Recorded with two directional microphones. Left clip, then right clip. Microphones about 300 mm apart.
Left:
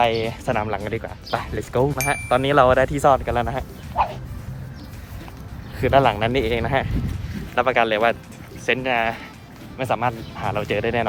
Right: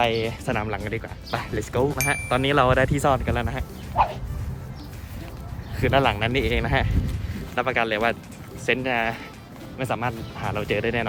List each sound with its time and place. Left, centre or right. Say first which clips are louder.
0.0 s speech: left 3 dB; centre
5.8 s speech: left 4 dB; centre